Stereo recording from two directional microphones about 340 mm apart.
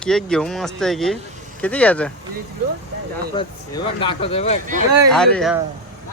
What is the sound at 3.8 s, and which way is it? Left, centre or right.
Speech, centre.